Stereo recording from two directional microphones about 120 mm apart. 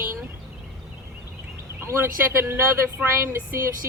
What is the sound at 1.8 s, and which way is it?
A woman's voice, 20° right (ahead or behind).